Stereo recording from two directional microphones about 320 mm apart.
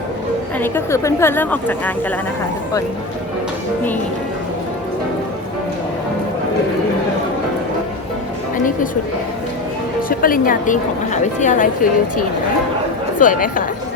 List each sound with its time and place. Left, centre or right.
0.6 s a woman's voice: centre
10.1 s a woman's voice: left